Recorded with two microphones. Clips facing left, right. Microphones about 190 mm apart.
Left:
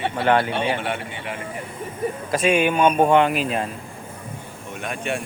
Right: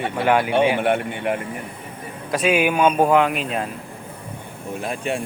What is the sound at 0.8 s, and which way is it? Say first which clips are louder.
Speech: right 7 dB; 55° right (ahead or behind).